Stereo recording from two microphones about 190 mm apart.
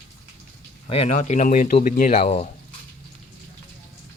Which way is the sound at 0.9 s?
35° left (ahead or behind).